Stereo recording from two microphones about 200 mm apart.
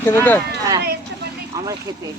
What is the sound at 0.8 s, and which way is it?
Vehicle, 55° right (ahead or behind).